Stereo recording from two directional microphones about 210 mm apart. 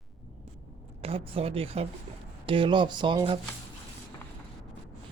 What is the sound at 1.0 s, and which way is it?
Speech, 25° right (ahead or behind).